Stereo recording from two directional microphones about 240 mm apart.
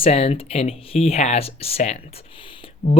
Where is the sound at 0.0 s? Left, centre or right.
Left.